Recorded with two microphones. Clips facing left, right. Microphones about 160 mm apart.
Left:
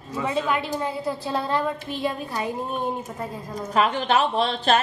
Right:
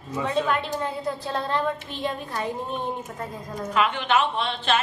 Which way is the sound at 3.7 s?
40° left (ahead or behind).